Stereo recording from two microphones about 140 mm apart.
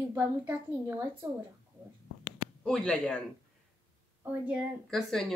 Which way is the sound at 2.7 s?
5° left (ahead or behind).